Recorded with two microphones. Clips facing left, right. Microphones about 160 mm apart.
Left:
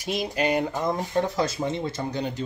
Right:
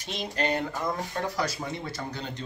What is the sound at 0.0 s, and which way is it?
Speech, 10° left (ahead or behind).